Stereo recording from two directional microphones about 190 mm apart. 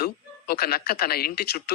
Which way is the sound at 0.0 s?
55° left (ahead or behind).